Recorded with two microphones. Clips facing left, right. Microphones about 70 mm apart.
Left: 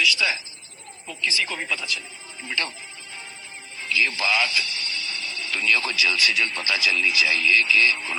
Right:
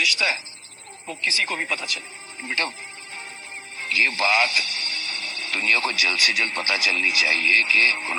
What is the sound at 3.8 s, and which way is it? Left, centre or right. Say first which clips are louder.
Speech: right 2 dB; right.